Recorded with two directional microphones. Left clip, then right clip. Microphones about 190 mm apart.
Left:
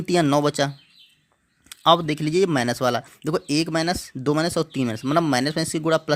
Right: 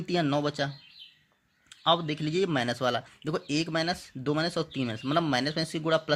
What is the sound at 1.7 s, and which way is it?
Speech, 40° left (ahead or behind).